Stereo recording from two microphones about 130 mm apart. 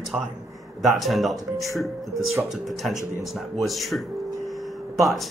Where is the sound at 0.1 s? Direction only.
5° right (ahead or behind).